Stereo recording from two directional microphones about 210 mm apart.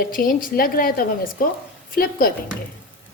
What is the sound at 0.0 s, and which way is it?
Speech, 40° left (ahead or behind).